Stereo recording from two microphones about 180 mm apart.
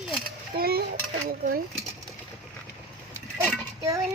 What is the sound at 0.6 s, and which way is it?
Speech, 60° right (ahead or behind).